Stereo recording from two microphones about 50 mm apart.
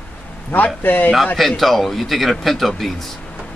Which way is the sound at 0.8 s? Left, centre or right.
Left.